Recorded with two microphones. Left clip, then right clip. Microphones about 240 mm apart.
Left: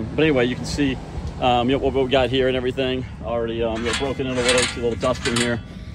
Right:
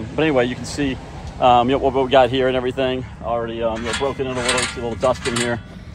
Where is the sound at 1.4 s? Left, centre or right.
Centre.